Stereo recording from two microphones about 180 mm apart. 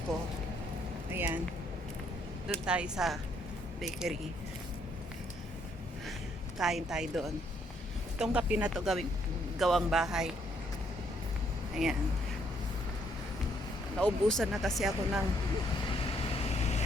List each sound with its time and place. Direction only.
1.1 s a sound: 10° right (ahead or behind)
2.6 s speech: 5° right (ahead or behind)
6.6 s speech: 5° right (ahead or behind)
8.2 s speech: 5° right (ahead or behind)
11.7 s speech: centre (ahead or behind)
14.0 s speech: 5° left (ahead or behind)
16.6 s vehicle: 40° left (ahead or behind)